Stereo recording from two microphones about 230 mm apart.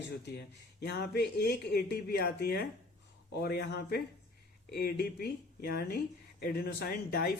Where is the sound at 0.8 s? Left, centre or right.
Left.